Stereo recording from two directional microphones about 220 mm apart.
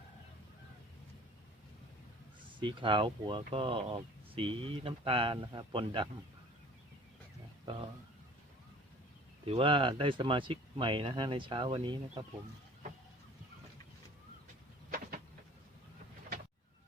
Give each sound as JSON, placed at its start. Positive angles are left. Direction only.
{"t": 2.6, "sound": "speech", "side_deg": -20}
{"t": 7.6, "sound": "speech", "side_deg": -20}
{"t": 9.5, "sound": "speech", "side_deg": -25}
{"t": 14.8, "sound": "vehicle", "side_deg": -40}